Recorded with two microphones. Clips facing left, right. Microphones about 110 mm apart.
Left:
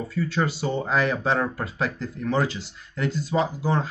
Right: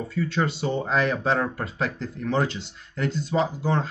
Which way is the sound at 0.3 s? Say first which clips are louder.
Even; 5° left (ahead or behind).